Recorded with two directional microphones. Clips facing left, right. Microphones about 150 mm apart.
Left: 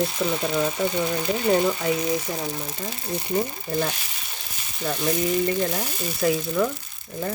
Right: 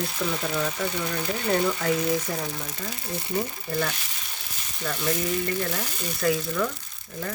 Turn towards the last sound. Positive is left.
turn(degrees=20)  # may be behind; listen again after turning